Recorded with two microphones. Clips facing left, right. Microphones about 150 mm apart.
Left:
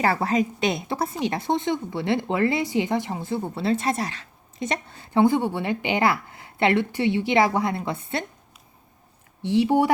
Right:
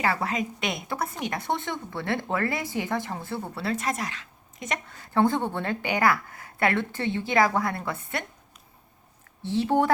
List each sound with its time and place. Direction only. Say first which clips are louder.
0.0 s a woman's voice: left 5 dB; 35° left (ahead or behind)
5.2 s speech: left 4 dB; 10° left (ahead or behind)
9.4 s speech: left 4 dB; 15° left (ahead or behind)